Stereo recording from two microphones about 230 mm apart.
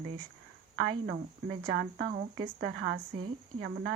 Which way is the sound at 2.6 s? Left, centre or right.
Right.